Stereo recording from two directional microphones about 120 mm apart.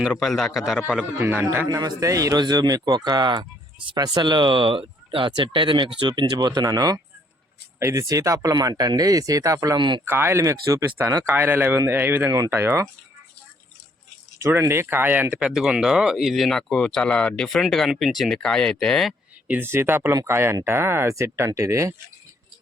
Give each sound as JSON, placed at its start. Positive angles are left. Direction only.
{"t": 0.1, "sound": "speech", "side_deg": 0}
{"t": 1.2, "sound": "a man's voice", "side_deg": -15}
{"t": 1.6, "sound": "speech", "side_deg": -35}
{"t": 10.1, "sound": "a man's voice", "side_deg": -20}
{"t": 14.3, "sound": "speech", "side_deg": -20}
{"t": 19.5, "sound": "speech", "side_deg": -20}